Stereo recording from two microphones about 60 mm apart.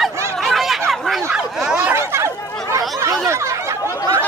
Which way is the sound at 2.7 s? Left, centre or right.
Right.